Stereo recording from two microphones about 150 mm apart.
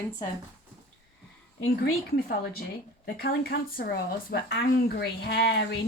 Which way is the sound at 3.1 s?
90° left.